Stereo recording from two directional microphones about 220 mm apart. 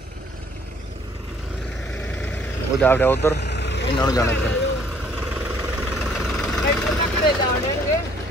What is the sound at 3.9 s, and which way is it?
Speech, 15° left (ahead or behind).